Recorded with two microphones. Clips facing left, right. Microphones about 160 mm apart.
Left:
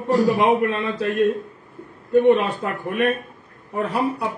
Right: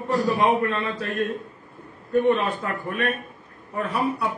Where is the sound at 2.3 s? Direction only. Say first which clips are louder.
Left 4 dB; 20° left (ahead or behind).